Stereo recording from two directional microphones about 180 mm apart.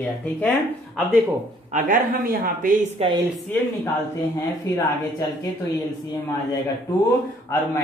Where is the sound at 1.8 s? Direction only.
50° right (ahead or behind).